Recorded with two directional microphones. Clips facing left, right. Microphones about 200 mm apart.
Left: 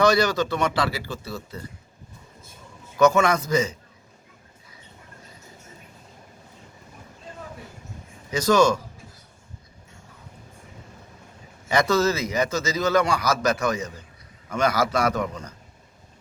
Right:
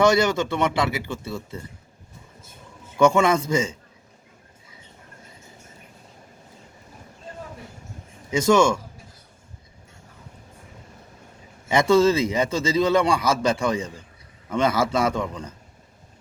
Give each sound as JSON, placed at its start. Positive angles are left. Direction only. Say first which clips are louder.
{"t": 0.0, "sound": "a man's voice", "louder": "right 1 dB", "side_deg": -25}
{"t": 3.0, "sound": "a man's voice", "louder": "right 1 dB", "side_deg": -25}
{"t": 8.3, "sound": "a man's voice", "louder": "right 1 dB", "side_deg": -25}
{"t": 11.7, "sound": "a man's voice", "louder": "right 4 dB", "side_deg": -25}